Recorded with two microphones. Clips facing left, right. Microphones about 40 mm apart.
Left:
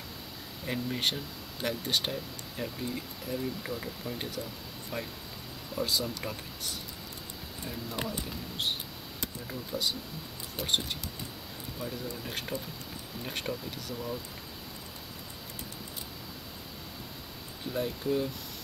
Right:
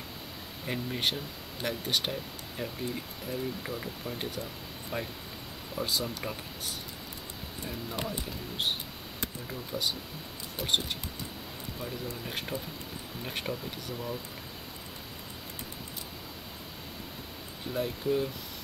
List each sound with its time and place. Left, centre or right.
0.7 s speech: centre
4.9 s speech: centre
5.8 s speech: centre
8.1 s speech: centre
17.7 s speech: centre